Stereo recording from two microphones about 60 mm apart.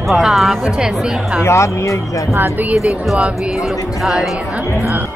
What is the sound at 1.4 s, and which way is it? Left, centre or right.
Speech, left.